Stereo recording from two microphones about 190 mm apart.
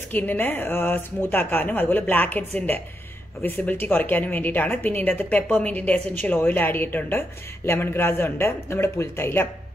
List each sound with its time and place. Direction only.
0.1 s a woman's voice: 10° left (ahead or behind)
3.4 s a woman's voice: 10° left (ahead or behind)